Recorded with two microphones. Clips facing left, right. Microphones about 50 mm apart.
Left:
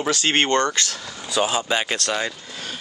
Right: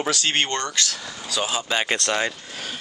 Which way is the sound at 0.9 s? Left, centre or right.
Centre.